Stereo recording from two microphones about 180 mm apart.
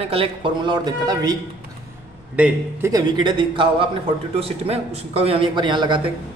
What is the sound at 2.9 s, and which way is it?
A man's voice, 20° right (ahead or behind).